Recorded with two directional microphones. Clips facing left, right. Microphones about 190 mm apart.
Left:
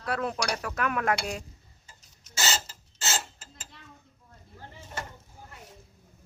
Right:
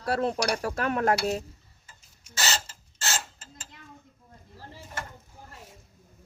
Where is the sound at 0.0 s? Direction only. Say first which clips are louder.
Right 4 dB; 30° right (ahead or behind).